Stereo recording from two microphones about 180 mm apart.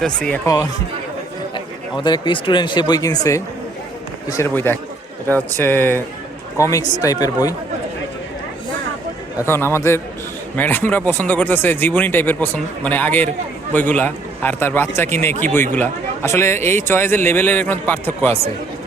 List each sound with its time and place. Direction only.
0.0 s speech: 5° left (ahead or behind)
0.4 s speech: 20° left (ahead or behind)
2.0 s speech: 25° left (ahead or behind)
9.5 s speech: 15° left (ahead or behind)